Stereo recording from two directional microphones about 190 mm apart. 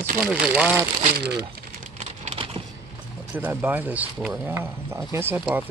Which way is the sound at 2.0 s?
35° right (ahead or behind).